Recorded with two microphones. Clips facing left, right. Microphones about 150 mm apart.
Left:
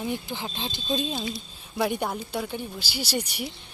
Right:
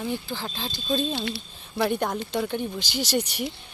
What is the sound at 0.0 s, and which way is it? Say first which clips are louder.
Speech: right 1 dB; 15° left (ahead or behind).